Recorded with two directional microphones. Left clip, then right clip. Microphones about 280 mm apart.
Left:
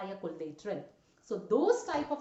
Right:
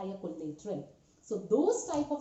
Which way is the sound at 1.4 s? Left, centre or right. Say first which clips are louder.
Left 1 dB; left.